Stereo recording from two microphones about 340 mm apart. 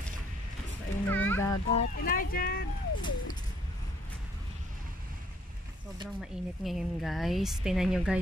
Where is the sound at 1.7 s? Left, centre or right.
Left.